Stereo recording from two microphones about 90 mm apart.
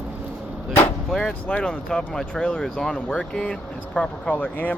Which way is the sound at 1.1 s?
10° left (ahead or behind).